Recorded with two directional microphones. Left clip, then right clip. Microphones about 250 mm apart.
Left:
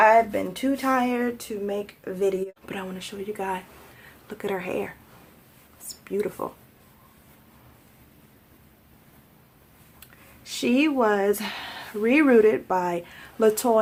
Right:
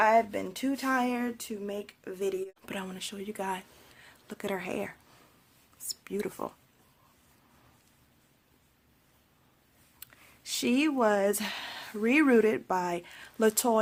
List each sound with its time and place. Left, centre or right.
0.0 s speech: right
10.0 s speech: right